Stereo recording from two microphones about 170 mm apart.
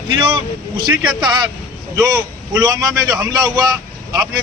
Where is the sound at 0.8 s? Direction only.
25° right (ahead or behind).